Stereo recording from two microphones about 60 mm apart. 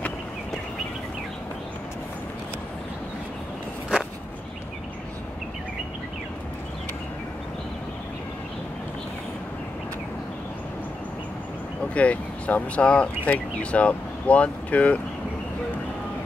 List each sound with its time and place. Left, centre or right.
11.9 s speech: left